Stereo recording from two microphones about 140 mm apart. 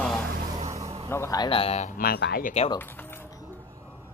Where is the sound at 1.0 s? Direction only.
20° left (ahead or behind).